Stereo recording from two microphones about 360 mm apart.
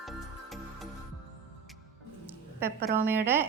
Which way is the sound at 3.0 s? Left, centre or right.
Centre.